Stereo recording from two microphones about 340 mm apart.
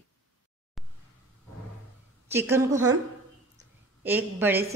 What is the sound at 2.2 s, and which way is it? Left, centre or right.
Speech, centre.